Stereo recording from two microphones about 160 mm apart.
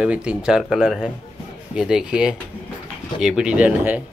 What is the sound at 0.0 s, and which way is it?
Speech, 5° right (ahead or behind).